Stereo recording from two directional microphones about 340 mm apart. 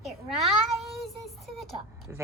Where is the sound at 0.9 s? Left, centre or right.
Centre.